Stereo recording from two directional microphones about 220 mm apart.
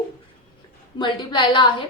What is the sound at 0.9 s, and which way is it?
Speech, 20° left (ahead or behind).